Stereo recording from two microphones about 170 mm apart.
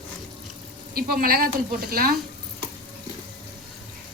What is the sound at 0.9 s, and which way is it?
A woman's voice, 60° right (ahead or behind).